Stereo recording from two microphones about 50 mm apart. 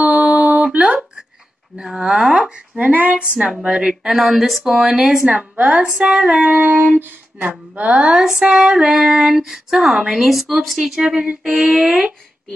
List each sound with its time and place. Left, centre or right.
0.0 s music: right
0.8 s a sound: centre
1.8 s female singing: centre
2.8 s a woman's voice: right
3.2 s speech: right; by 4.9 s centre
4.9 s female singing: centre
5.9 s female singing: centre
6.4 s a woman's voice: right
8.2 s female singing: centre
10.2 s speech: centre
10.8 s female singing: centre
11.7 s speech: centre